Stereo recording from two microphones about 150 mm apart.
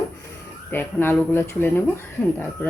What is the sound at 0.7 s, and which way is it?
A woman's voice, 15° left (ahead or behind).